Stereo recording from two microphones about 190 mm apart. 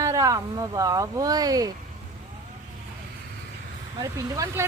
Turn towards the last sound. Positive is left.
turn(degrees=-15)  # may be behind; listen again after turning